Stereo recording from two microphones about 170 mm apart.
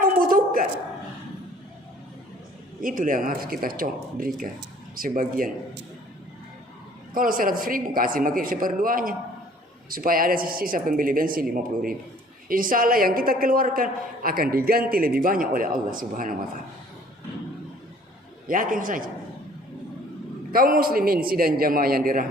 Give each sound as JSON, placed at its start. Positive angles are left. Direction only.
{"t": 0.2, "sound": "a sound", "side_deg": -55}
{"t": 2.8, "sound": "a woman's voice", "side_deg": -50}
{"t": 7.1, "sound": "a woman's voice", "side_deg": -55}
{"t": 18.4, "sound": "a man's voice", "side_deg": -55}
{"t": 20.5, "sound": "a woman's voice", "side_deg": -60}